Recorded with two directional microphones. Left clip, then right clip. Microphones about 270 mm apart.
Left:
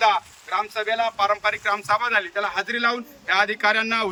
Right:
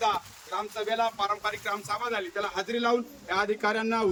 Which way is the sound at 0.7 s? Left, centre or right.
Centre.